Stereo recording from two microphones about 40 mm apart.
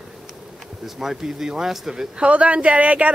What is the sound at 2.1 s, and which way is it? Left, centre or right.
Speech, right.